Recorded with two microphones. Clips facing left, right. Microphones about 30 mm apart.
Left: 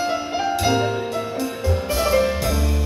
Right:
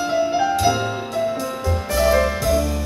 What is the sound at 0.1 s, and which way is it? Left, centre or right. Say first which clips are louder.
Music: right 5 dB; left.